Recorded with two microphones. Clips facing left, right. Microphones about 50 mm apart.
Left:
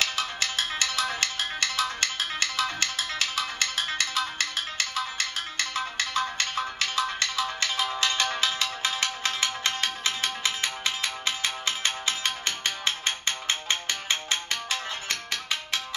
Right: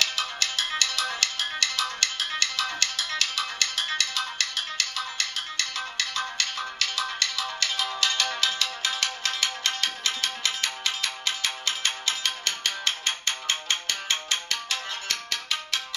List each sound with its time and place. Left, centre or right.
0.0 s music: left